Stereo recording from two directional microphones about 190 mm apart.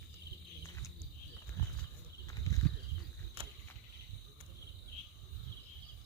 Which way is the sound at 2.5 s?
15° left (ahead or behind).